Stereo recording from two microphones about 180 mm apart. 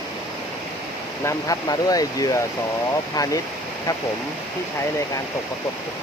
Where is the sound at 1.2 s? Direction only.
20° left (ahead or behind).